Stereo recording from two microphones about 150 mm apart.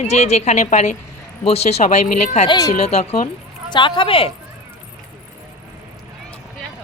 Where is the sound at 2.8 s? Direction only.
45° left (ahead or behind).